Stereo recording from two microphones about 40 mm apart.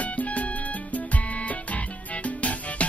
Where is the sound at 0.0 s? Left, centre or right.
Left.